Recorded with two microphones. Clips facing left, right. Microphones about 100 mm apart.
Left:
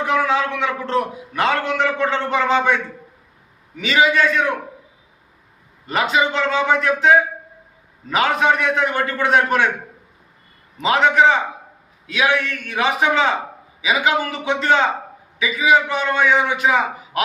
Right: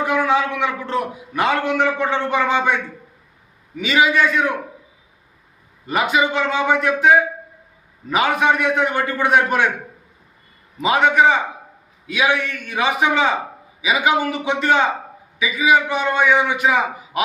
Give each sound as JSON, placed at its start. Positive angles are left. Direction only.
{"t": 0.0, "sound": "a man's voice", "side_deg": -15}
{"t": 5.9, "sound": "a man's voice", "side_deg": -15}
{"t": 10.8, "sound": "a man's voice", "side_deg": -15}